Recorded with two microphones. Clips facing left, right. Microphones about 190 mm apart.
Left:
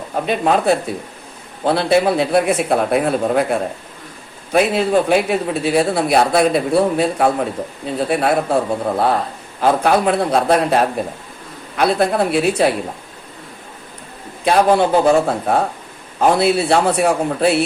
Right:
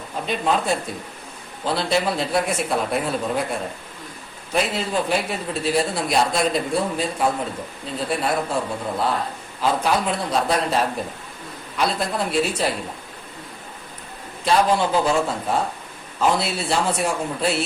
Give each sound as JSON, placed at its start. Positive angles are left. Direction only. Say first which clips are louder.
{"t": 0.3, "sound": "a man's voice", "louder": "left 6 dB", "side_deg": 60}
{"t": 14.4, "sound": "a man's voice", "louder": "left 5 dB", "side_deg": 55}